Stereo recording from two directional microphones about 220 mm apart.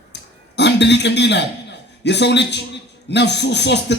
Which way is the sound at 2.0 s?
50° left (ahead or behind).